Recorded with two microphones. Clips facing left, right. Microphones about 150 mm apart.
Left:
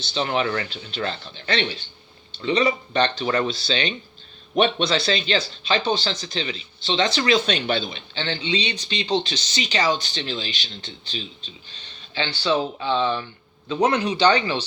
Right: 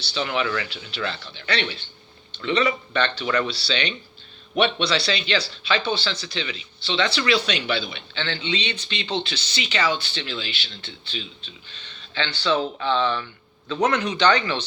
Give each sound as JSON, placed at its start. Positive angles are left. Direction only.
{"t": 0.0, "sound": "speech", "side_deg": 40}
{"t": 12.8, "sound": "speech", "side_deg": 20}
{"t": 13.8, "sound": "speech", "side_deg": 30}